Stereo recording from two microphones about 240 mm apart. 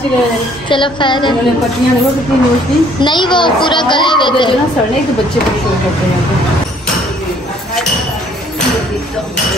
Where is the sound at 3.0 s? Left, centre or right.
Centre.